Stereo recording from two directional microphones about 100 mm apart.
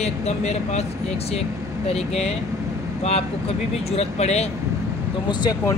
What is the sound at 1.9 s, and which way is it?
Speech, 90° left.